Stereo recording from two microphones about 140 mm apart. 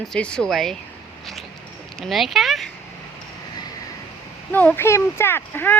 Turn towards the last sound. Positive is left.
turn(degrees=15)  # may be behind; listen again after turning